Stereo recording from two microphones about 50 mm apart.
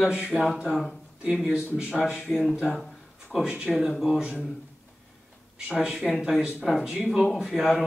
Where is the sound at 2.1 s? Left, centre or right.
Centre.